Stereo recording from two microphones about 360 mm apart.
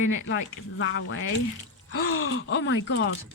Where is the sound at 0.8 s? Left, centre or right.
Left.